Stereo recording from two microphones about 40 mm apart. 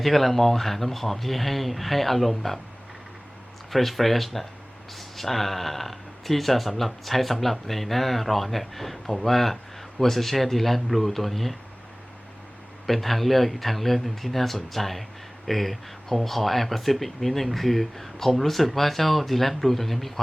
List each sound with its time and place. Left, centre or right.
0.0 s speech: centre
3.7 s speech: centre
12.9 s speech: centre